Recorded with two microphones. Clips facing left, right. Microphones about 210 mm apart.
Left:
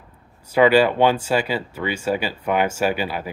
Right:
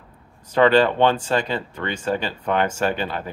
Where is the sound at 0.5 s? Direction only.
10° left (ahead or behind).